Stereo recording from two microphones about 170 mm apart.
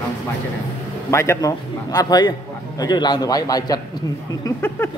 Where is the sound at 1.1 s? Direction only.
15° left (ahead or behind).